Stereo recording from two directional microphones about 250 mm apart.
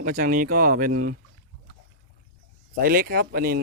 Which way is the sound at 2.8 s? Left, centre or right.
Right.